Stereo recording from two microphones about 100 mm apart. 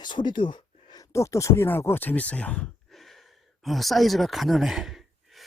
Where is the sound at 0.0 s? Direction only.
50° left (ahead or behind).